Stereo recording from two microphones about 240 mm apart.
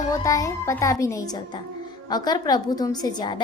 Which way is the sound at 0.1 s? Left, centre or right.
Centre.